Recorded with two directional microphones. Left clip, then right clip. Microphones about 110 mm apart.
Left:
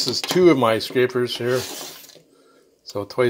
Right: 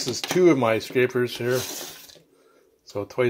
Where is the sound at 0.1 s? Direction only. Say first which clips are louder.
Left 2 dB; 5° left (ahead or behind).